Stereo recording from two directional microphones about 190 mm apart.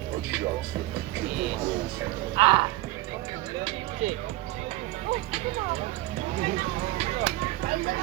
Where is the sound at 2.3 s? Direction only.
25° right (ahead or behind).